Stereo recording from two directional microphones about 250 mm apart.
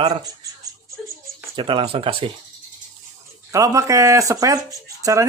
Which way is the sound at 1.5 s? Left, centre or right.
Centre.